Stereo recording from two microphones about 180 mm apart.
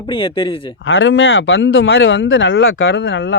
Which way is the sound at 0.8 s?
90° left.